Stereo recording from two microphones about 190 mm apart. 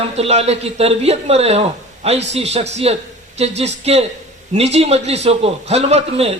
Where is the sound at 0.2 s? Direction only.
35° right (ahead or behind).